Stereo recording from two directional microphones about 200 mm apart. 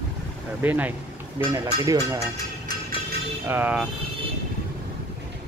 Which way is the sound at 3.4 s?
10° right (ahead or behind).